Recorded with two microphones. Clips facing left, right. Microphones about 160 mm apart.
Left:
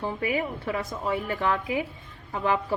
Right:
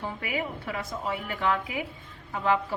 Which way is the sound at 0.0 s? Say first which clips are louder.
Left 4 dB; 30° left (ahead or behind).